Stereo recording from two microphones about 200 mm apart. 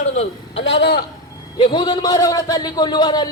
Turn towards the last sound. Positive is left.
turn(degrees=20)  # may be behind; listen again after turning